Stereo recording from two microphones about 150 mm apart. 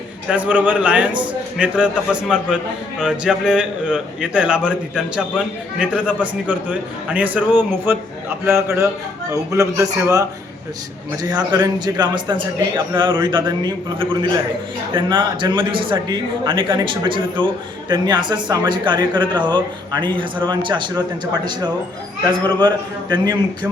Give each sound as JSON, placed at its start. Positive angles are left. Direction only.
{"t": 0.3, "sound": "a man's voice", "side_deg": -10}
{"t": 22.6, "sound": "a man's voice", "side_deg": -30}